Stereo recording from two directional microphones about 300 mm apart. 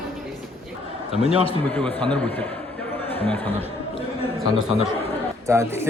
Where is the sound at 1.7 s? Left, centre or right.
Centre.